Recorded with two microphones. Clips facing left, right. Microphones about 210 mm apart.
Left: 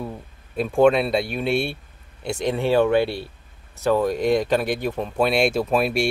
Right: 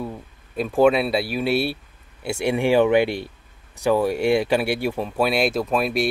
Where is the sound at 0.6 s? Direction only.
5° right (ahead or behind).